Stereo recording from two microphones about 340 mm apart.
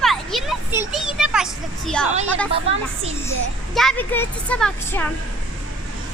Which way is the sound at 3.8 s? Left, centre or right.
Centre.